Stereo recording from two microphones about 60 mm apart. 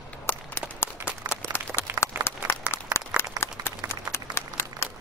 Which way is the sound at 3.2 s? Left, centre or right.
Left.